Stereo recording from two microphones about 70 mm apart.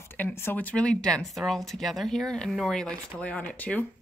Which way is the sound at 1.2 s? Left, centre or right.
Centre.